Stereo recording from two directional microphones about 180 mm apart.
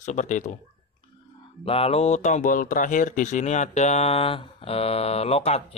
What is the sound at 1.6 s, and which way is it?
Speech, 35° left (ahead or behind).